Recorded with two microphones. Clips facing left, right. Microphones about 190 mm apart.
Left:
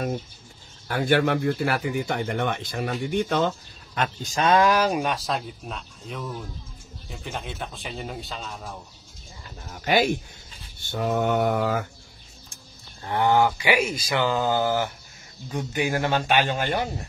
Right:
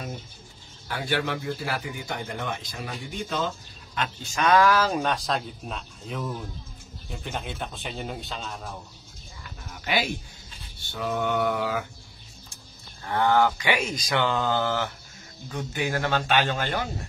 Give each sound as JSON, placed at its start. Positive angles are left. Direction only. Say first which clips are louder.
{"t": 0.8, "sound": "a man's voice", "louder": "left 7 dB", "side_deg": 50}
{"t": 9.7, "sound": "a sound", "louder": "left 6 dB", "side_deg": 45}
{"t": 10.9, "sound": "a man's voice", "louder": "left 4 dB", "side_deg": 45}
{"t": 13.0, "sound": "speech", "louder": "left 1 dB", "side_deg": 15}